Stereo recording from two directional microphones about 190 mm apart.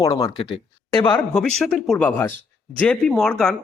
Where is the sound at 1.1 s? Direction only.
5° left (ahead or behind).